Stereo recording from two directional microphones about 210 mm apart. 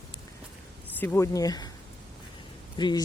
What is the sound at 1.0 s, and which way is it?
Speech, 10° left (ahead or behind).